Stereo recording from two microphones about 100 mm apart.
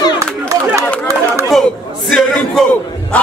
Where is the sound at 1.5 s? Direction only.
Centre (ahead or behind).